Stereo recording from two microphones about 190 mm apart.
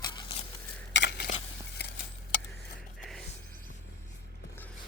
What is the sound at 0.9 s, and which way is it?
Stir, 65° left (ahead or behind).